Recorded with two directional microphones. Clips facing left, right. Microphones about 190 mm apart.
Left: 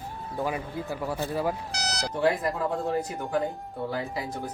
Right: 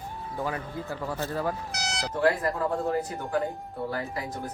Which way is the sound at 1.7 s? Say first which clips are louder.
Left 1 dB; 35° left (ahead or behind).